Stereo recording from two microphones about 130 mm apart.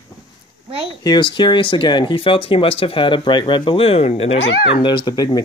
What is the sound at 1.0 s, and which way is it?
Speech, 35° left (ahead or behind).